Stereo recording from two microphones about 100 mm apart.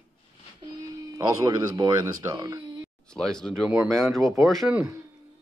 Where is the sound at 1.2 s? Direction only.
45° right (ahead or behind).